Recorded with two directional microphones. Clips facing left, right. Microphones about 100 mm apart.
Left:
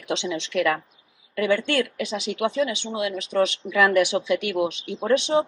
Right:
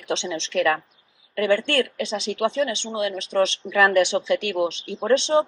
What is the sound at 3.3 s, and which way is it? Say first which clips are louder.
Speech: right 1 dB; 50° right (ahead or behind).